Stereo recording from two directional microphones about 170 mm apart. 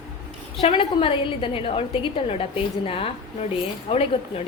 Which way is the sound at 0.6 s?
30° left (ahead or behind).